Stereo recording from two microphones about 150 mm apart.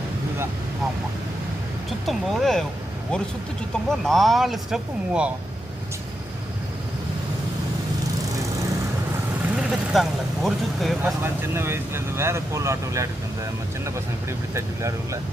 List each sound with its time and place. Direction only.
1.9 s speech: centre (ahead or behind)
3.8 s speech: centre (ahead or behind)
9.6 s speech: 5° right (ahead or behind)
11.0 s speech: 15° right (ahead or behind)